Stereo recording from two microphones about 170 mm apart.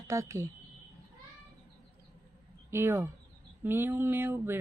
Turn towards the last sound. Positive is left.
turn(degrees=-15)  # may be behind; listen again after turning